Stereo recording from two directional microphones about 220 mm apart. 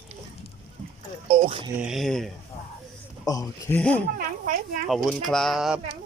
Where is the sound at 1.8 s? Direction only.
Centre (ahead or behind).